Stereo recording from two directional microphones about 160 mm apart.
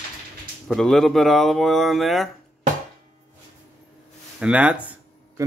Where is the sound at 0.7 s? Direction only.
Centre (ahead or behind).